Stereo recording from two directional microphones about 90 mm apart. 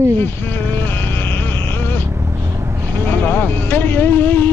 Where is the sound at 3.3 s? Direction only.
25° left (ahead or behind).